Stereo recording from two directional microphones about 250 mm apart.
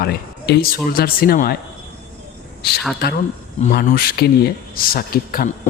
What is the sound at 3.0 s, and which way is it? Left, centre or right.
Speech, left.